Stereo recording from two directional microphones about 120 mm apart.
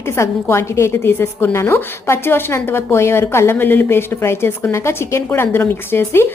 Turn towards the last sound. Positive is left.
turn(degrees=20)  # may be behind; listen again after turning